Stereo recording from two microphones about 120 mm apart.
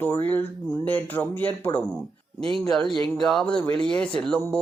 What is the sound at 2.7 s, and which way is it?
Speech, 5° left (ahead or behind).